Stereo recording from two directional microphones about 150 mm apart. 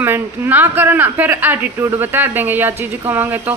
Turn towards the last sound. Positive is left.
turn(degrees=-15)  # may be behind; listen again after turning